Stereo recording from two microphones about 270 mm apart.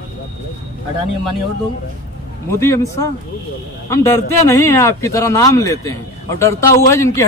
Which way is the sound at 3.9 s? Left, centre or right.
Centre.